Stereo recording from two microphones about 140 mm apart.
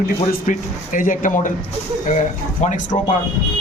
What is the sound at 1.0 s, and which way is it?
Speech, 70° left (ahead or behind).